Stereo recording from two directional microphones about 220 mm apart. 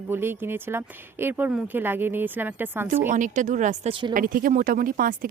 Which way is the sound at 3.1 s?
35° right (ahead or behind).